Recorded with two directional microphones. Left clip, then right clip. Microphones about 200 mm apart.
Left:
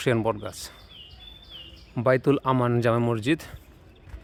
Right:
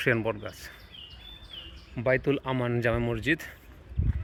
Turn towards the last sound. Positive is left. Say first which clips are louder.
# left 4 dB
turn(degrees=25)  # may be behind; listen again after turning